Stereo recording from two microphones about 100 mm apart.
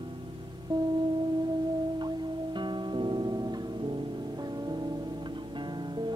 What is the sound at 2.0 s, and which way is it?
Music, 50° right (ahead or behind).